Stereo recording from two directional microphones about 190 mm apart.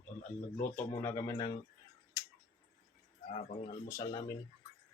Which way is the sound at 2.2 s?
20° left (ahead or behind).